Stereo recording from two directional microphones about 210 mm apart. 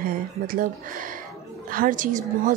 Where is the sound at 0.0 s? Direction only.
45° right (ahead or behind).